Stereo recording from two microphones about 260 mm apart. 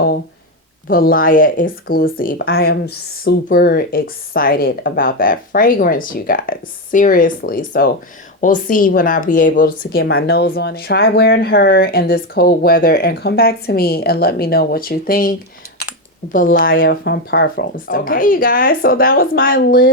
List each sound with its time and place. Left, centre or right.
0.9 s speech: left